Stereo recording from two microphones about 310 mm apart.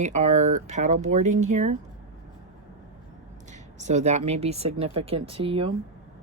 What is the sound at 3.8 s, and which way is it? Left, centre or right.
Speech, right.